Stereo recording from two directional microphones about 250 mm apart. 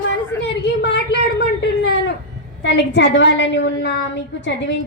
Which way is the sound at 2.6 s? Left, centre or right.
Left.